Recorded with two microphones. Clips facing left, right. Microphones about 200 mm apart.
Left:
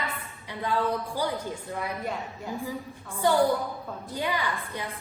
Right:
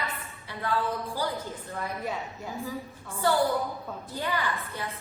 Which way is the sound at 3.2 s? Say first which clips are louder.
Left 2 dB; 15° left (ahead or behind).